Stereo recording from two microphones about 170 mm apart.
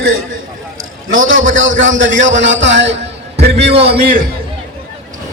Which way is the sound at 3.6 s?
35° right (ahead or behind).